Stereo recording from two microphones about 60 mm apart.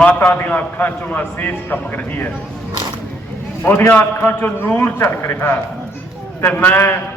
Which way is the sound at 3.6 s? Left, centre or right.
Left.